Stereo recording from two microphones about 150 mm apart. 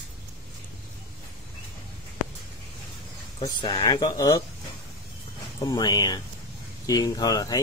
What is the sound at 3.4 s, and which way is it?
Speech, 30° left (ahead or behind).